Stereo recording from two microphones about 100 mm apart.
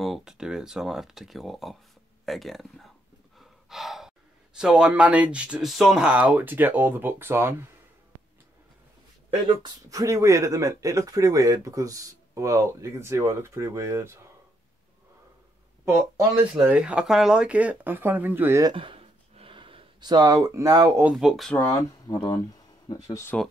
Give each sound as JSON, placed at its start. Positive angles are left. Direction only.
{"t": 0.0, "sound": "speech", "side_deg": -5}
{"t": 3.3, "sound": "gasp", "side_deg": 0}
{"t": 4.6, "sound": "speech", "side_deg": -10}
{"t": 9.6, "sound": "speech", "side_deg": -35}
{"t": 15.8, "sound": "speech", "side_deg": -35}
{"t": 16.6, "sound": "speech", "side_deg": -10}
{"t": 18.8, "sound": "a sound", "side_deg": -70}
{"t": 20.0, "sound": "speech", "side_deg": -45}
{"t": 21.1, "sound": "speech", "side_deg": -5}
{"t": 21.7, "sound": "speech", "side_deg": 40}